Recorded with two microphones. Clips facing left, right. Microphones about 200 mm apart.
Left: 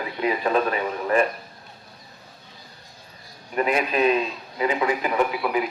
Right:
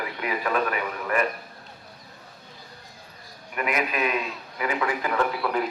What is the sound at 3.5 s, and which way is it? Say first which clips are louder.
A man's voice: left 5 dB; 30° left (ahead or behind).